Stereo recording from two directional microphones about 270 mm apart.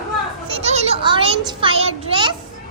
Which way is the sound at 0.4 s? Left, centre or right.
Right.